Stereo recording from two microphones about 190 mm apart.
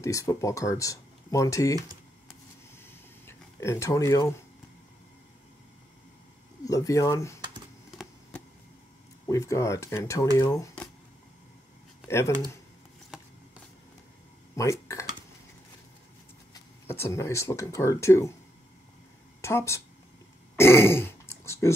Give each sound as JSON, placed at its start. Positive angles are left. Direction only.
{"t": 0.0, "sound": "speech", "side_deg": 15}
{"t": 2.9, "sound": "a sound", "side_deg": 15}
{"t": 6.6, "sound": "speech", "side_deg": 15}
{"t": 9.3, "sound": "speech", "side_deg": 15}
{"t": 14.5, "sound": "dishes", "side_deg": 15}
{"t": 16.5, "sound": "speech", "side_deg": 15}
{"t": 19.4, "sound": "speech", "side_deg": 15}
{"t": 20.5, "sound": "a sound", "side_deg": 15}